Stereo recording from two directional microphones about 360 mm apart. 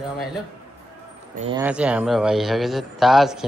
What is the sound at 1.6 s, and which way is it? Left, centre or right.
Speech, centre.